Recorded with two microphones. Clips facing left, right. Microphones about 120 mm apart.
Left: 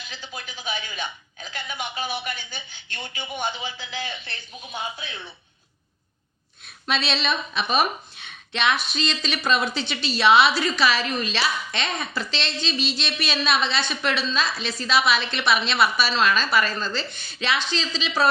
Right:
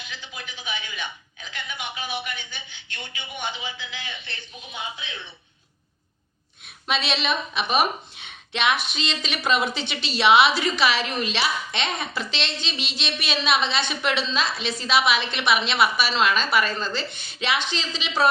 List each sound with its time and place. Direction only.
0.1 s a woman's voice: 35° left (ahead or behind)
6.8 s a woman's voice: 15° right (ahead or behind)